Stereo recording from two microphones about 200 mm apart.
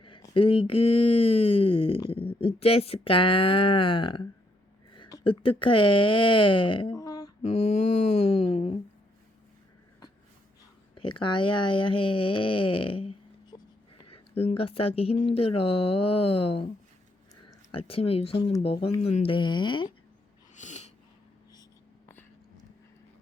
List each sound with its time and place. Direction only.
0.0 s a sound: 25° left (ahead or behind)
0.7 s speech: 25° left (ahead or behind)
7.4 s mantra: 30° left (ahead or behind)
10.9 s speech: 25° left (ahead or behind)
17.7 s speech: 25° left (ahead or behind)
20.6 s a sound: 35° left (ahead or behind)